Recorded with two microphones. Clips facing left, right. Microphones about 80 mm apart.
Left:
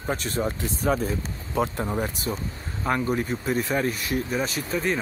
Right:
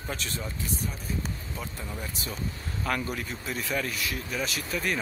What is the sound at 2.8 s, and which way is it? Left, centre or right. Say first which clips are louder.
Speech: left 5 dB; left.